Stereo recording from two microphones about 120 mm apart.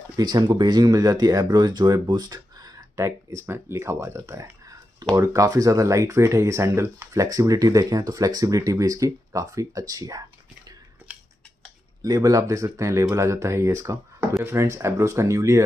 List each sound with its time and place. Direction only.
0.2 s speech: 35° right (ahead or behind)
12.0 s speech: 30° right (ahead or behind)